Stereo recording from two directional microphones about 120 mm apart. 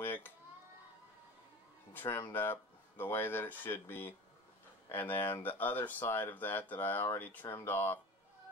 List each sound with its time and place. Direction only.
0.0 s dishes: 15° left (ahead or behind)
2.0 s speech: 20° left (ahead or behind)